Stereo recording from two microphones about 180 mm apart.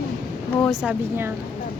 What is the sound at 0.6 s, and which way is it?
Speech, centre (ahead or behind).